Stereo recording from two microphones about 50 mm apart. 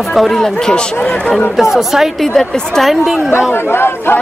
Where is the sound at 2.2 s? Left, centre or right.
Centre.